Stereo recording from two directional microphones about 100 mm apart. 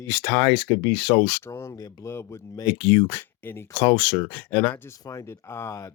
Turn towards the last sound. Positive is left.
turn(degrees=25)  # may be behind; listen again after turning